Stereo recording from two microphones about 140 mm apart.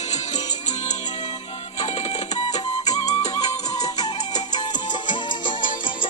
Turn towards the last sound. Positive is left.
turn(degrees=35)  # may be behind; listen again after turning